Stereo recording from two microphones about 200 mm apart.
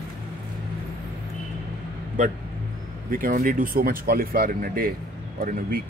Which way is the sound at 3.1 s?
45° right (ahead or behind).